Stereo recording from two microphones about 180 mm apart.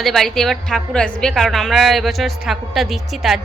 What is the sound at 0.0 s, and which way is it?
Speech, centre (ahead or behind).